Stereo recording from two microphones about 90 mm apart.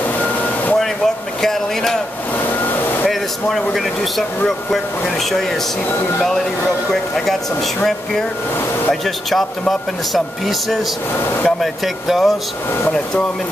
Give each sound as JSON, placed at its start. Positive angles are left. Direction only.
{"t": 0.2, "sound": "air conditioning", "side_deg": 20}
{"t": 0.7, "sound": "a sound", "side_deg": 5}
{"t": 2.3, "sound": "vehicle", "side_deg": 20}
{"t": 3.1, "sound": "speech", "side_deg": 5}
{"t": 6.9, "sound": "speech", "side_deg": 5}